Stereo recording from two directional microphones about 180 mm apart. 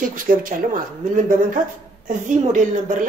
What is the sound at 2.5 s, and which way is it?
Speech, 45° right (ahead or behind).